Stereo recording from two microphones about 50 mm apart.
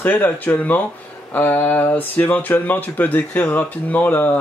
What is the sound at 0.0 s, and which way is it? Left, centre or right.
Speech, left.